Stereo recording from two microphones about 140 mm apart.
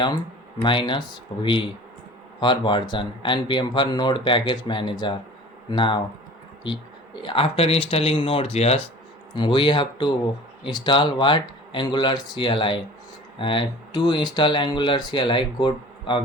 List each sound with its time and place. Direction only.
0.6 s speech: 35° left (ahead or behind)
7.2 s speech: 40° left (ahead or behind)
9.3 s speech: 35° left (ahead or behind)